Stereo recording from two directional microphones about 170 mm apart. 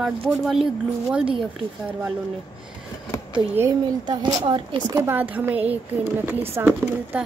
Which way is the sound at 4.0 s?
25° right (ahead or behind).